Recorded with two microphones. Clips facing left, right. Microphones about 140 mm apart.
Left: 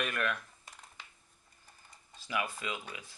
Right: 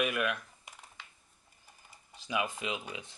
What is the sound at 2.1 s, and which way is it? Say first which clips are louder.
Speech: right 2 dB; 20° right (ahead or behind).